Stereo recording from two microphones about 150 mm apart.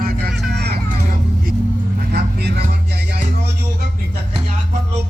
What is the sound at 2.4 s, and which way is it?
Speech, 90° right.